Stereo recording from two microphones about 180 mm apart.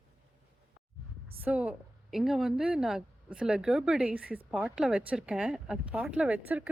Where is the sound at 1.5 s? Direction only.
5° right (ahead or behind).